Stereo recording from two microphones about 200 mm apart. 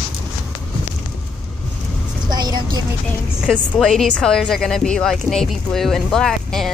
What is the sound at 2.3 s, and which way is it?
Vehicle, 20° right (ahead or behind).